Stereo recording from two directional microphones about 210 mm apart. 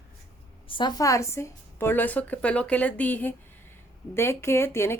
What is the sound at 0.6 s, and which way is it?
A woman's voice, 20° left (ahead or behind).